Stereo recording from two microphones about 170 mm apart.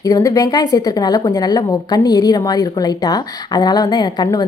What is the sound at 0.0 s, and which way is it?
A woman's voice, 20° left (ahead or behind).